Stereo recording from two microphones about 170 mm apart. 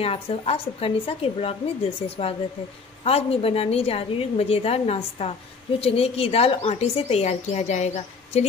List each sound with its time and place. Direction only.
0.0 s a woman's voice: 35° left (ahead or behind)